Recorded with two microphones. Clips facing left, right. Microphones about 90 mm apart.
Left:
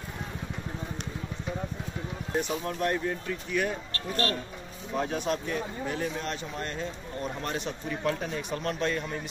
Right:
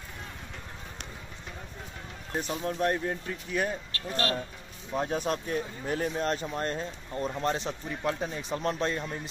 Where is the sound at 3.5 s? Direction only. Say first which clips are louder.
Left 1 dB; 35° right (ahead or behind).